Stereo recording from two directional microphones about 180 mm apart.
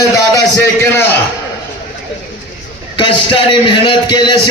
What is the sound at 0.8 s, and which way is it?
Speech, 15° left (ahead or behind).